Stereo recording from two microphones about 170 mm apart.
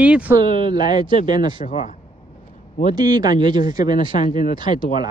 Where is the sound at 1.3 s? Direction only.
25° right (ahead or behind).